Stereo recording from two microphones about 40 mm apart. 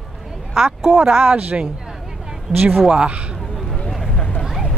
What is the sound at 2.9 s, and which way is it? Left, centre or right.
Speech, right.